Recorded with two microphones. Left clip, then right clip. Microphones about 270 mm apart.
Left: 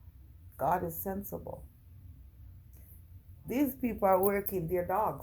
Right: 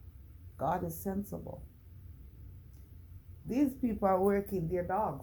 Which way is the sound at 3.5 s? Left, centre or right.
Left.